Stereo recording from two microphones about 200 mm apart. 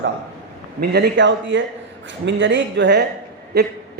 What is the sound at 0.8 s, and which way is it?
A man's voice, 55° right (ahead or behind).